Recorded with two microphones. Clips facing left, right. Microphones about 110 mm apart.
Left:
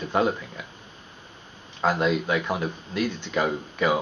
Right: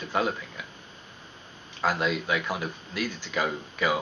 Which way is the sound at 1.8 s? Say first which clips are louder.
Left 4 dB; centre (ahead or behind).